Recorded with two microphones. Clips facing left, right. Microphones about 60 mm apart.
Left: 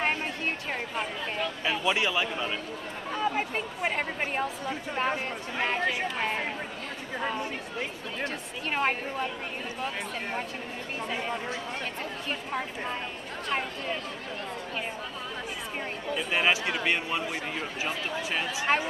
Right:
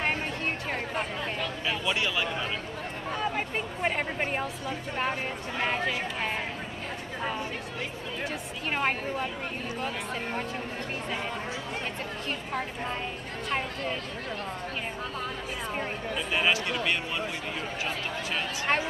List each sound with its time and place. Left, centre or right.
0.7 s speech: centre
3.1 s speech: centre
8.2 s speech: centre
12.3 s speech: centre
16.3 s speech: centre
18.7 s speech: centre